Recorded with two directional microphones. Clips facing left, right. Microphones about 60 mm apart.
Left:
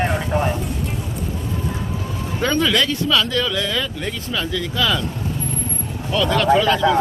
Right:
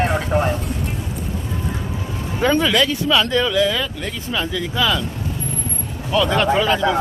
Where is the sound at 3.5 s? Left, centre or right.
Centre.